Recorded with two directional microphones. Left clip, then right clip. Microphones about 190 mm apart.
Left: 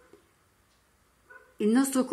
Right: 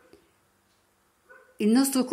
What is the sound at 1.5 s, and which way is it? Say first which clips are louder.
Speech: right 2 dB; 15° right (ahead or behind).